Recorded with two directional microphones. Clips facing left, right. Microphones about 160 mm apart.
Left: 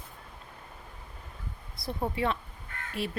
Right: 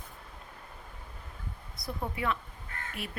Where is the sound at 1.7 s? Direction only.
30° left (ahead or behind).